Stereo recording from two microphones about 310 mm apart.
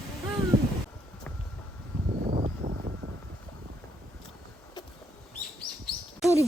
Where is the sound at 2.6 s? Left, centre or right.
Right.